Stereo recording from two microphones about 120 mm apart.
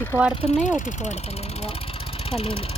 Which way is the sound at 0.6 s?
90° left.